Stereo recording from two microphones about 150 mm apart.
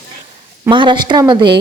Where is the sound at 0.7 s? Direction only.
30° right (ahead or behind).